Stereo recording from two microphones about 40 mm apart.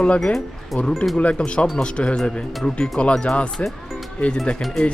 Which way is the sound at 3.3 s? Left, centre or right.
Left.